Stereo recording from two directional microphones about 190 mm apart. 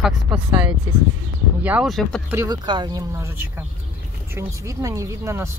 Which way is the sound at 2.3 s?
20° right (ahead or behind).